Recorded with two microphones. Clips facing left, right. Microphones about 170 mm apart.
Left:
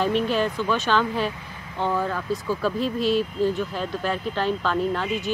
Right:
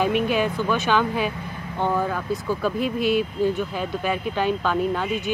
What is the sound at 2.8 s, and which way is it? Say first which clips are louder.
Speech: right 1 dB; 60° right (ahead or behind).